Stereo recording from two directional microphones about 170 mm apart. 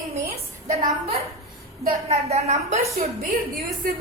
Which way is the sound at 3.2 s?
60° right (ahead or behind).